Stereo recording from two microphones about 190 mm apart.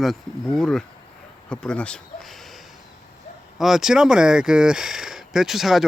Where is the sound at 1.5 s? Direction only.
5° left (ahead or behind).